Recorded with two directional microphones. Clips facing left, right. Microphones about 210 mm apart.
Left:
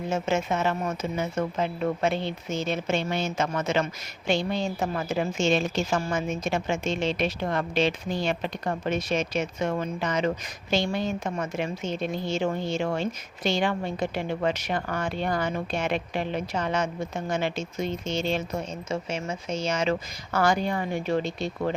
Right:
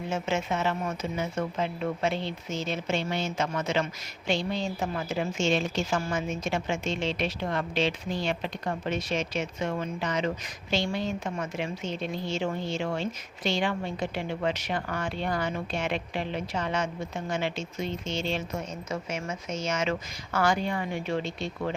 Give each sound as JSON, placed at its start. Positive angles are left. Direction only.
{"t": 0.1, "sound": "a woman's voice", "side_deg": 45}
{"t": 18.9, "sound": "speech", "side_deg": 30}